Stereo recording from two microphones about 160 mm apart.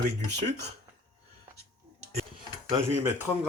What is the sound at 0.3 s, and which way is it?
Speech, 90° right.